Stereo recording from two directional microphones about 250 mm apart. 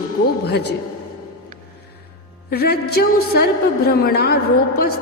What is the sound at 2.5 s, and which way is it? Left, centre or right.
A man's voice, left.